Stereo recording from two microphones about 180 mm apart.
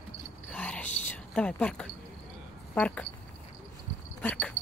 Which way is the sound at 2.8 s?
5° left (ahead or behind).